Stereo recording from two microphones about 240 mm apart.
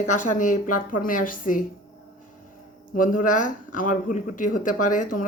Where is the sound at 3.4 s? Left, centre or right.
Left.